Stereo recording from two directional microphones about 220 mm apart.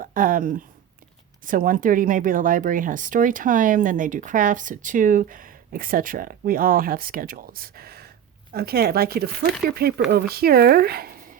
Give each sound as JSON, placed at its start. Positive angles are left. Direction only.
{"t": 0.0, "sound": "speech", "side_deg": -40}